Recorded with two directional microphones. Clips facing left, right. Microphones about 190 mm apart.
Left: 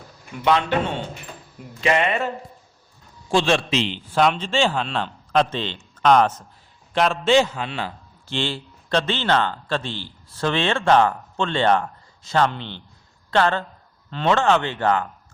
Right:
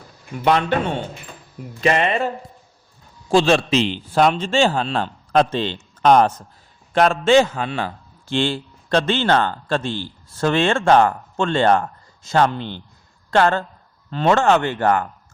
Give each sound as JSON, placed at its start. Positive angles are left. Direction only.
{"t": 1.8, "sound": "a man's voice", "side_deg": -40}
{"t": 3.3, "sound": "a man's voice", "side_deg": -40}